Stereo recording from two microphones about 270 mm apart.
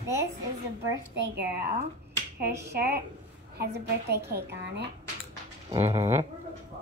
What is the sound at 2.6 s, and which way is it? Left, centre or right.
A woman's voice, right.